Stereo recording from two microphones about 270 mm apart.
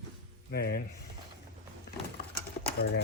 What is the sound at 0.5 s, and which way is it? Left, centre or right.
Speech, left.